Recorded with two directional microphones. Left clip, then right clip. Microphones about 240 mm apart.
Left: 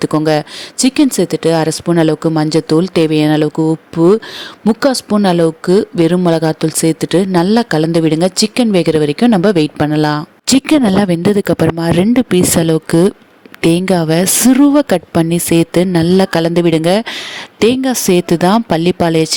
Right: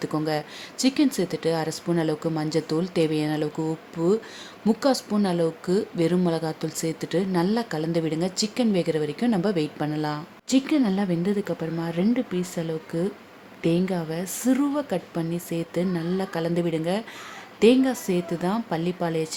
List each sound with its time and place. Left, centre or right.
0.0 s speech: left